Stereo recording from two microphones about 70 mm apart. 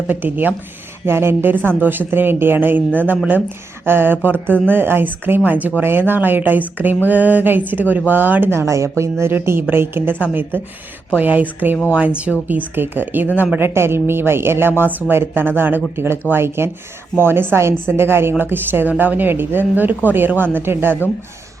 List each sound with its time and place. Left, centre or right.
0.1 s a woman's voice: right